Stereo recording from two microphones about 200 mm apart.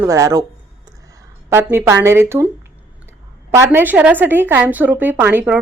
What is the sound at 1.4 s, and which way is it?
A woman's voice, 10° right (ahead or behind).